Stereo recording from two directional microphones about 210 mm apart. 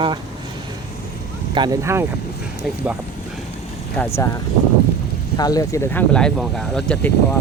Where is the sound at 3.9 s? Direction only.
10° left (ahead or behind).